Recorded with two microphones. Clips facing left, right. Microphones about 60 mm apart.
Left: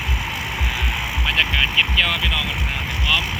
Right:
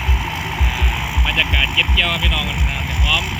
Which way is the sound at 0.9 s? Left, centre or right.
Centre.